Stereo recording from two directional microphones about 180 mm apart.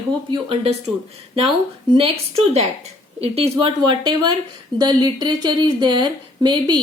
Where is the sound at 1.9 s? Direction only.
35° right (ahead or behind).